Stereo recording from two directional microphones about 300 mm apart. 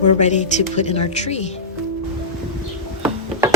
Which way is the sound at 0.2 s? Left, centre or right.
Left.